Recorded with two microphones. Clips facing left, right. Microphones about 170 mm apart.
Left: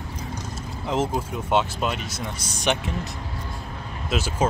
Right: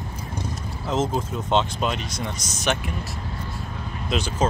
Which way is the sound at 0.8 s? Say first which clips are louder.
Right 1 dB; 10° left (ahead or behind).